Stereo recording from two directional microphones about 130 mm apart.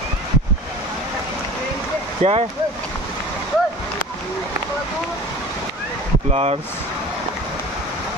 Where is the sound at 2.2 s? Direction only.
55° right (ahead or behind).